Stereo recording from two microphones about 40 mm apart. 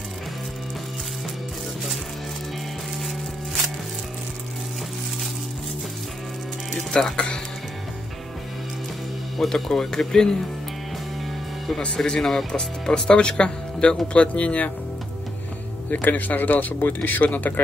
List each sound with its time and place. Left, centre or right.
6.9 s speech: centre
9.5 s speech: centre
12.2 s speech: centre
12.5 s speech: left
15.9 s speech: left